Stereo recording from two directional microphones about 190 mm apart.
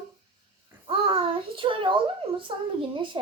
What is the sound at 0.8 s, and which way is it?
Child singing, 30° right (ahead or behind).